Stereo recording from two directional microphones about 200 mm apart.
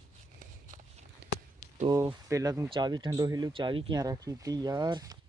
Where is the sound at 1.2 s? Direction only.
55° right (ahead or behind).